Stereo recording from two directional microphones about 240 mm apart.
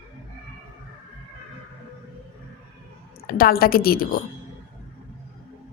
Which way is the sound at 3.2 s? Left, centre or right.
Left.